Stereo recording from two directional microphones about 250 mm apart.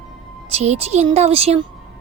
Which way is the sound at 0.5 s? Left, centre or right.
Right.